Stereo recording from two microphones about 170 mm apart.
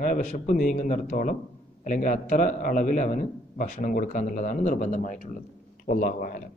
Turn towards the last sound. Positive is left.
turn(degrees=55)  # may be behind; listen again after turning